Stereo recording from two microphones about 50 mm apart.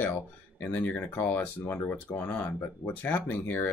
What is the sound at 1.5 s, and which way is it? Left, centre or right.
Speech, left.